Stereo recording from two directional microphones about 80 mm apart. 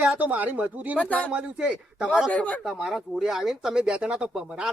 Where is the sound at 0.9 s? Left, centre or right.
Centre.